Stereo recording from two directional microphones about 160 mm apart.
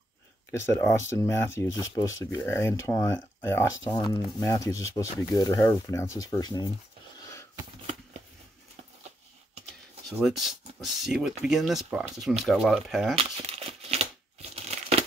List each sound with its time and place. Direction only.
0.5 s speech: 15° left (ahead or behind)
10.0 s speech: centre (ahead or behind)
13.2 s crumpling: 40° right (ahead or behind)